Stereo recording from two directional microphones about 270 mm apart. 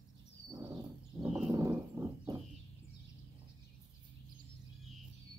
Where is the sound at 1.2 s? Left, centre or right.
Centre.